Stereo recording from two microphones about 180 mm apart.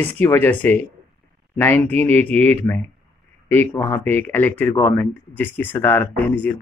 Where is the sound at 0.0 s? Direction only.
10° left (ahead or behind).